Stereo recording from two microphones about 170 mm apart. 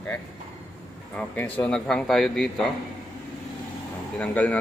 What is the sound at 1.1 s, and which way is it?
A man's voice, 10° left (ahead or behind).